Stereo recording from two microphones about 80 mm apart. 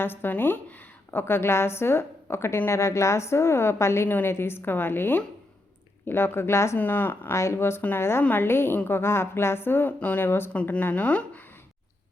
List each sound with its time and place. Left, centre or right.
0.0 s a woman's voice: left
1.2 s a woman's voice: left
6.7 s a woman's voice: left
7.3 s a woman's voice: left; by 11.4 s centre